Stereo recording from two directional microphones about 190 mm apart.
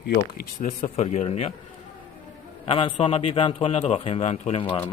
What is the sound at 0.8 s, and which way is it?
Speech, 35° left (ahead or behind).